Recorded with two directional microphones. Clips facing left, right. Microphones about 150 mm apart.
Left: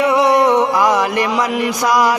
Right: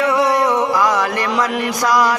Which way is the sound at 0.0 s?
20° left (ahead or behind).